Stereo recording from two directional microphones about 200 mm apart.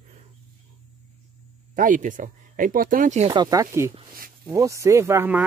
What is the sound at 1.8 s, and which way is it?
Speech, 40° right (ahead or behind).